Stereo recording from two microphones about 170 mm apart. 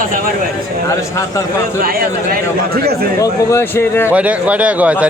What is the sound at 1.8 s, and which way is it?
Speech, 60° right (ahead or behind).